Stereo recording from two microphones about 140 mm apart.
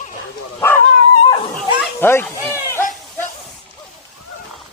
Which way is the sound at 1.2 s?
40° left (ahead or behind).